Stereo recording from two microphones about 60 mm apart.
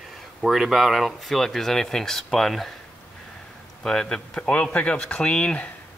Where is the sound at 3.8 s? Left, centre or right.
Centre.